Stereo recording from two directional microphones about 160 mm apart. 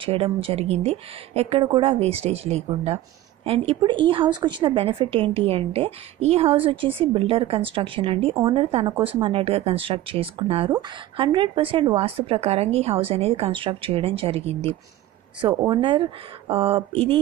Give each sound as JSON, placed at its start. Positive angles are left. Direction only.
{"t": 0.0, "sound": "a woman's voice", "side_deg": -35}